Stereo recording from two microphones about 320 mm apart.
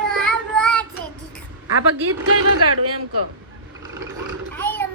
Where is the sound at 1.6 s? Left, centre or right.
Right.